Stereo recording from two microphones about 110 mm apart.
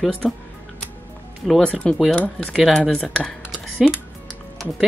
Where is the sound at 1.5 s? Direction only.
10° left (ahead or behind).